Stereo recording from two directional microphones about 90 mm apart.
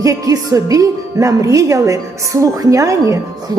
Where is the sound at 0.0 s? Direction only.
40° right (ahead or behind).